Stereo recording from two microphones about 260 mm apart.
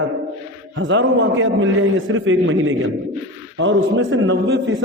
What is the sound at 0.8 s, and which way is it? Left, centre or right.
A man's voice, right.